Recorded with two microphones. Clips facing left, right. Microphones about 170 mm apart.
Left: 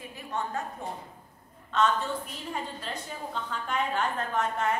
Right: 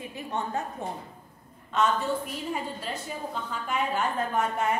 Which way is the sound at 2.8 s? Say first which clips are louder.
Right 3 dB; 5° right (ahead or behind).